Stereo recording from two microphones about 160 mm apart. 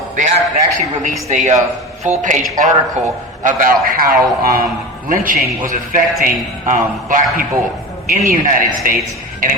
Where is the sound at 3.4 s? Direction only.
60° right (ahead or behind).